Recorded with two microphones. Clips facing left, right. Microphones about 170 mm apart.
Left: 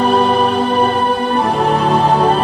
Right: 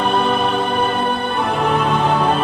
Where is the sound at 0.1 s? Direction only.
35° left (ahead or behind).